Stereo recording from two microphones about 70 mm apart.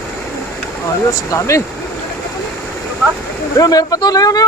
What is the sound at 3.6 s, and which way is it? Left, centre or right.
Speech, left.